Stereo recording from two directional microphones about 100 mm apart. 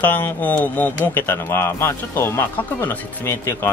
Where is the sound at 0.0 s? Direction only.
15° left (ahead or behind).